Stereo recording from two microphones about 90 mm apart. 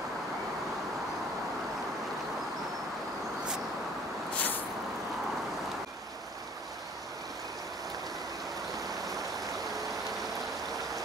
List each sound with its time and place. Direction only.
4.4 s vehicle: 20° left (ahead or behind)
8.7 s stream: 40° right (ahead or behind)